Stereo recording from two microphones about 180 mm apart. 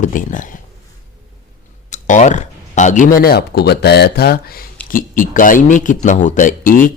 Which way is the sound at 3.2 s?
60° left (ahead or behind).